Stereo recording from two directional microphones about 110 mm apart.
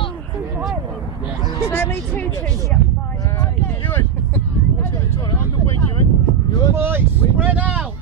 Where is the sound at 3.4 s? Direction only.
20° left (ahead or behind).